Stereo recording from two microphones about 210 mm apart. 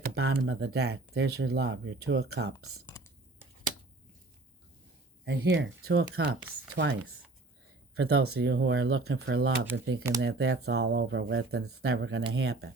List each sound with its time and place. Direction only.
0.0 s speech: 50° right (ahead or behind); by 0.9 s 70° right (ahead or behind)
1.1 s speech: 55° right (ahead or behind)
5.2 s speech: 60° right (ahead or behind)
5.9 s speech: 50° right (ahead or behind)
7.9 s speech: 50° right (ahead or behind)
8.9 s speech: 75° right (ahead or behind)
9.2 s speech: 55° right (ahead or behind); by 12.2 s 70° right (ahead or behind)
12.3 s speech: 55° right (ahead or behind)